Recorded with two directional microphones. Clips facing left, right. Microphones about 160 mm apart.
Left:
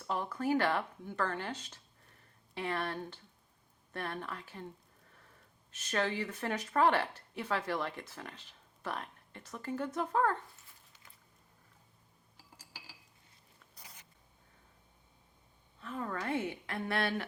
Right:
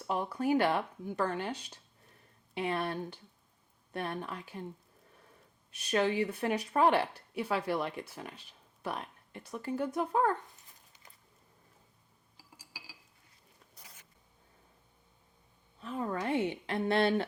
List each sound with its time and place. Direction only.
0.1 s speech: 15° right (ahead or behind)
5.7 s speech: 15° right (ahead or behind)
12.4 s glass: 10° right (ahead or behind)
15.8 s a woman's voice: 20° right (ahead or behind)